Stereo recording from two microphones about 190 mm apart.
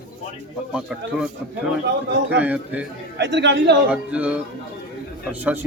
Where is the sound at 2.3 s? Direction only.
5° right (ahead or behind).